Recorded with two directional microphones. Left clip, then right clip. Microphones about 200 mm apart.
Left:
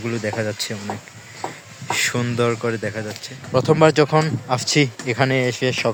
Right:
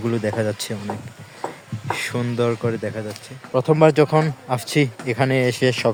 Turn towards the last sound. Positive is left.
turn(degrees=-20)  # may be behind; listen again after turning